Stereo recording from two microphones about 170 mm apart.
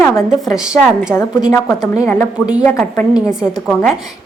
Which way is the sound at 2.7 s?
10° left (ahead or behind).